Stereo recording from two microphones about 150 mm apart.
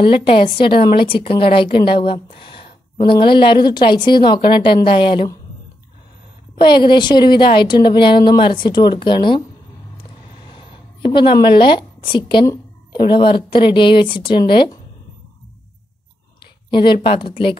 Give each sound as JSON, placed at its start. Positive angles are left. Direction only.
{"t": 0.0, "sound": "speech", "side_deg": 35}
{"t": 6.6, "sound": "speech", "side_deg": 30}
{"t": 10.5, "sound": "speech", "side_deg": 35}
{"t": 16.7, "sound": "speech", "side_deg": 30}